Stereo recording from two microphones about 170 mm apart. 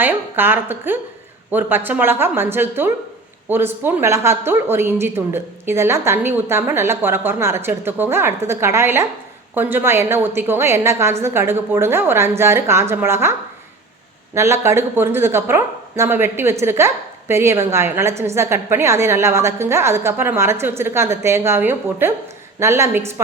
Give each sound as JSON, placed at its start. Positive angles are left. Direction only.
{"t": 0.0, "sound": "speech", "side_deg": -10}
{"t": 14.3, "sound": "speech", "side_deg": -15}